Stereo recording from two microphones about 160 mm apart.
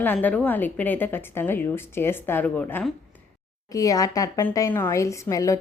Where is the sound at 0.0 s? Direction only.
10° left (ahead or behind).